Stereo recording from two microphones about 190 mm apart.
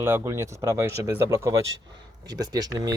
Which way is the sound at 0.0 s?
15° right (ahead or behind).